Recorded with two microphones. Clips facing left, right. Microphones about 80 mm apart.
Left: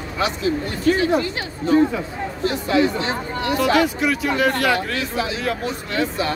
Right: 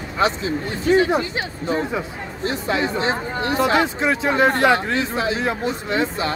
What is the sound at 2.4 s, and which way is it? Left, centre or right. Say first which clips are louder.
Speech: left 3 dB; right.